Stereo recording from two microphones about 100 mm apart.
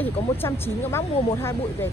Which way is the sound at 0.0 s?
25° left (ahead or behind).